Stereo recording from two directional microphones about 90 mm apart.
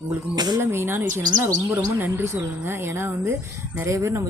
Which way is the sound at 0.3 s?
50° right (ahead or behind).